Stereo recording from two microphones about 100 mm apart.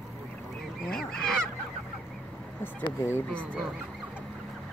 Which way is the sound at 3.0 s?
25° left (ahead or behind).